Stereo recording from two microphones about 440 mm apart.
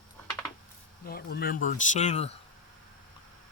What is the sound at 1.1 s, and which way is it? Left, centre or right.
Speech, centre.